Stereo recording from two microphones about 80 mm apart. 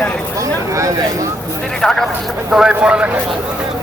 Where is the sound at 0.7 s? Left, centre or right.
Right.